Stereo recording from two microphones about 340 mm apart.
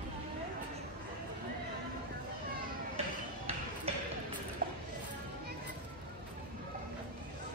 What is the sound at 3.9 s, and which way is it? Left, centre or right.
Music, centre.